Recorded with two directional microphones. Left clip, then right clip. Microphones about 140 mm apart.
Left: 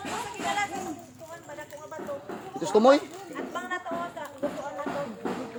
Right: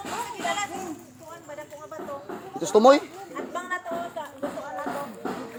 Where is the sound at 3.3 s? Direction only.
30° right (ahead or behind).